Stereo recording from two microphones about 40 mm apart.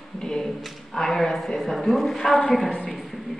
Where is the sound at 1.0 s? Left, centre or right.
Centre.